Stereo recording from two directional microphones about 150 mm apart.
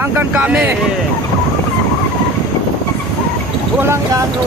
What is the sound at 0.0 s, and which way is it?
Speech, 10° right (ahead or behind).